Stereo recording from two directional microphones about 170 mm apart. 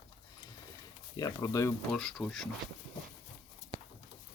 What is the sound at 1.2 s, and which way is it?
Speech, 20° left (ahead or behind).